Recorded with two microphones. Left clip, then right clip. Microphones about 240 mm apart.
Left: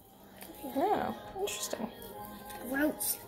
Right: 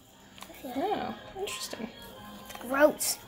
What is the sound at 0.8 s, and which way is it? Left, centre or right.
Speech, centre.